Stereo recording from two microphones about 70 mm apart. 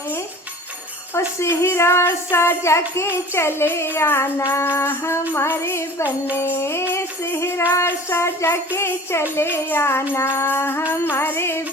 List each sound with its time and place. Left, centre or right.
1.4 s music: left